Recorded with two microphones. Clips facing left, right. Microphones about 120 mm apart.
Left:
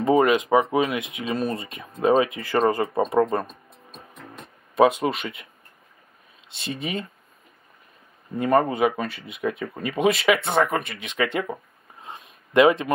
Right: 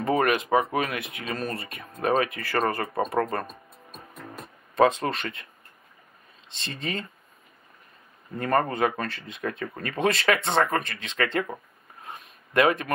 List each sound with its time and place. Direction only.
0.0 s speech: 20° left (ahead or behind)
4.7 s speech: 10° left (ahead or behind)
6.5 s speech: 10° left (ahead or behind)
8.4 s speech: 10° left (ahead or behind)
12.0 s a sound: 20° left (ahead or behind)